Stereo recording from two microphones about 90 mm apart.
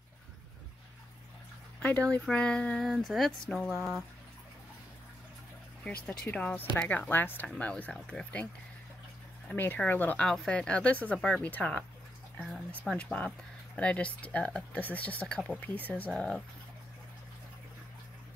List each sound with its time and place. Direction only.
1.8 s speech: 15° left (ahead or behind)
2.8 s speech: centre (ahead or behind)
5.9 s speech: 20° left (ahead or behind)
7.4 s speech: 10° left (ahead or behind)
9.5 s speech: 20° left (ahead or behind)
10.2 s speech: 5° left (ahead or behind)
12.4 s a sound: centre (ahead or behind)
12.9 s speech: 15° left (ahead or behind)